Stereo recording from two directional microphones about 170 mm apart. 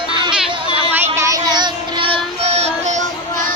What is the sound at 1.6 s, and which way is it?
Music, 25° right (ahead or behind).